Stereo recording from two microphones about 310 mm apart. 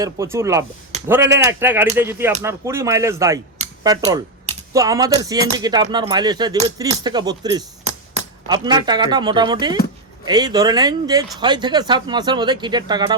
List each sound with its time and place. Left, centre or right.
0.0 s speech: centre